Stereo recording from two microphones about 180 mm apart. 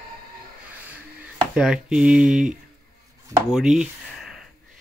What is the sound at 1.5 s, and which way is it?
Speech, 5° right (ahead or behind).